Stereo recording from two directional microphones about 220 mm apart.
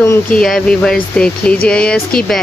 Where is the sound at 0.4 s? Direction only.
Centre (ahead or behind).